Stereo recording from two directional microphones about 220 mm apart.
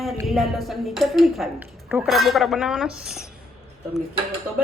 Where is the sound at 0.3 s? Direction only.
Centre (ahead or behind).